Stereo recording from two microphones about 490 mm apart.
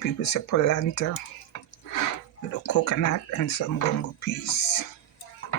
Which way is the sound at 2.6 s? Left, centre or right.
Left.